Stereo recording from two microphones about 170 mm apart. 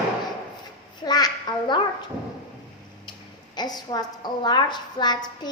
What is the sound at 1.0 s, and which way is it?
Speech, 25° left (ahead or behind).